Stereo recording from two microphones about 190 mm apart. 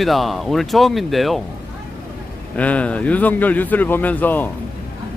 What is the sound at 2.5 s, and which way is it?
Speech, 5° left (ahead or behind).